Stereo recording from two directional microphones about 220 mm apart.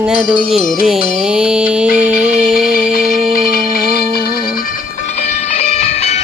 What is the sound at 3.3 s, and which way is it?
Music, 40° left (ahead or behind).